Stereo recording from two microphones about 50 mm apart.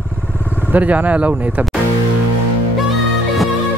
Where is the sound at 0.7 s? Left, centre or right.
Right.